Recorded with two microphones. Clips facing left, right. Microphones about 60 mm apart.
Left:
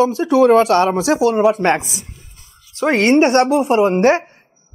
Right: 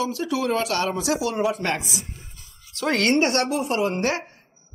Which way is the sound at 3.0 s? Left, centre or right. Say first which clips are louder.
Left 9 dB; left.